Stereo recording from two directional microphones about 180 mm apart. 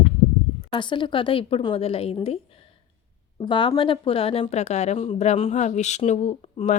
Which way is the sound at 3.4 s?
25° left (ahead or behind).